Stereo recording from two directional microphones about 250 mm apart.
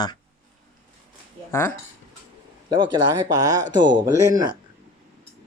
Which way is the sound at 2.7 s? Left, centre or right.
Centre.